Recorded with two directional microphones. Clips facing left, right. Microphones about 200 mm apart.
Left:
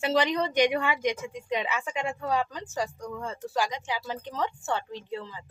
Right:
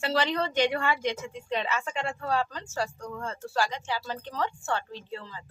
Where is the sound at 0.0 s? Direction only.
20° left (ahead or behind).